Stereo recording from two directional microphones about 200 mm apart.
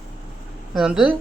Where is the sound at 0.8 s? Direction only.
5° right (ahead or behind).